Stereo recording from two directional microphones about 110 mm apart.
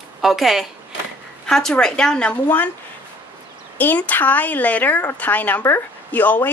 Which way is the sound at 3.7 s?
15° left (ahead or behind).